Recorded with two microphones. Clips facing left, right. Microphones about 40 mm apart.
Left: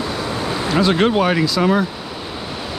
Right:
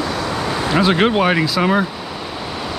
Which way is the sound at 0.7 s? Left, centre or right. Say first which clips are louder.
Even; centre.